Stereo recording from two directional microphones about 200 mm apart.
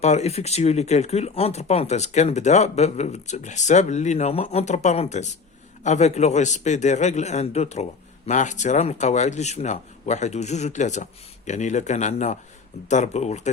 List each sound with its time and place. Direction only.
0.0 s speech: 35° left (ahead or behind)